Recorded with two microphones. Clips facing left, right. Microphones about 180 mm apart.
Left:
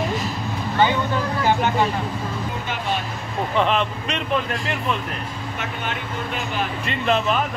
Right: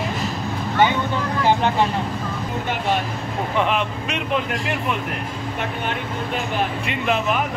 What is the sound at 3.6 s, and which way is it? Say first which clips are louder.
Speech: left 1 dB; 10° right (ahead or behind).